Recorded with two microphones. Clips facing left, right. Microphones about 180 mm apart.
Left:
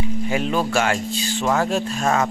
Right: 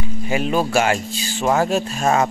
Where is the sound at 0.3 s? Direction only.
10° right (ahead or behind).